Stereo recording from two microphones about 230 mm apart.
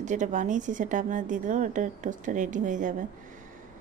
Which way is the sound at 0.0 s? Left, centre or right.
Right.